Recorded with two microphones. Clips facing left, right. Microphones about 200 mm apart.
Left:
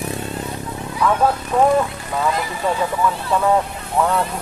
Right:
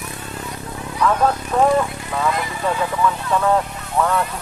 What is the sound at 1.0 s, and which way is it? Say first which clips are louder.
Speech: even; 5° left (ahead or behind).